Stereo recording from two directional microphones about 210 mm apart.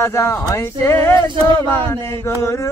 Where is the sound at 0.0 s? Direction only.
15° left (ahead or behind).